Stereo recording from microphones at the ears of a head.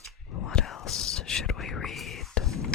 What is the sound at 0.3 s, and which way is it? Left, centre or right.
Whispering, left.